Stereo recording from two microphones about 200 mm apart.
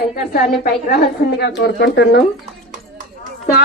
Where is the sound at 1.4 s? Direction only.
55° left (ahead or behind).